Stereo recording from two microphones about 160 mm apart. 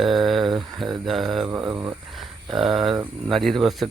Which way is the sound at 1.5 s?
15° right (ahead or behind).